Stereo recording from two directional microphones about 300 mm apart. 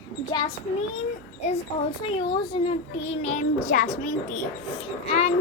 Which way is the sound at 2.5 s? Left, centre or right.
Centre.